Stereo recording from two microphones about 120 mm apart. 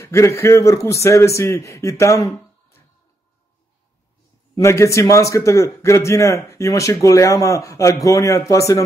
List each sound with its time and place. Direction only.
0.0 s a man's voice: 25° left (ahead or behind)
4.6 s a man's voice: 25° left (ahead or behind)